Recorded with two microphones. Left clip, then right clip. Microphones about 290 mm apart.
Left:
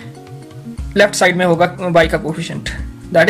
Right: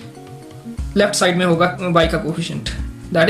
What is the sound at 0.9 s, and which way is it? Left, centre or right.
Speech, left.